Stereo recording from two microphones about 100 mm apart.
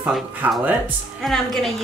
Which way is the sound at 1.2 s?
Centre (ahead or behind).